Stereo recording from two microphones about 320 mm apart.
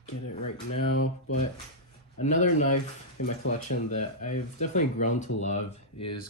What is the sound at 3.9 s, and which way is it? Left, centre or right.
Speech, left.